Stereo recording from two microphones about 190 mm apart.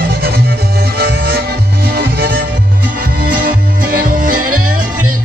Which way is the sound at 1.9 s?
55° right (ahead or behind).